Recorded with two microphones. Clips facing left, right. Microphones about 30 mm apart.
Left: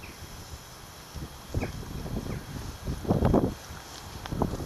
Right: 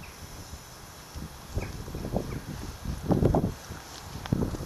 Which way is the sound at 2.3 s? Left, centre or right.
Centre.